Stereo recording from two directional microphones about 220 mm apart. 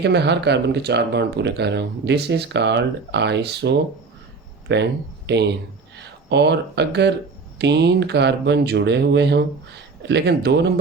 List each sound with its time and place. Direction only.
0.0 s speech: 50° right (ahead or behind)